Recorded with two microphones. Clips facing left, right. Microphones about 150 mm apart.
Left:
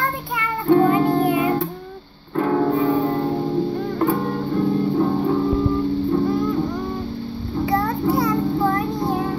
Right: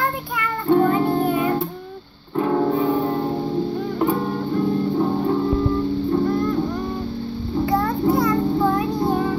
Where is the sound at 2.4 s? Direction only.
5° right (ahead or behind).